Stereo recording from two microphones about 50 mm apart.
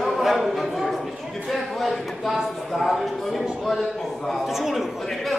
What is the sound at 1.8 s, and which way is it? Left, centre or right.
A man's voice, centre.